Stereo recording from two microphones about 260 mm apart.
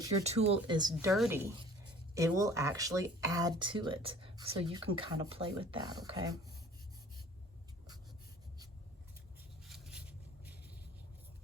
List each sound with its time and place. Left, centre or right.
0.2 s speech: right
0.9 s speech: centre
9.6 s a sound: centre